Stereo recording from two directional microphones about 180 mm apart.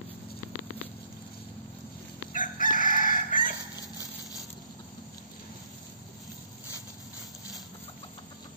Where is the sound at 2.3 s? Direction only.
50° left (ahead or behind).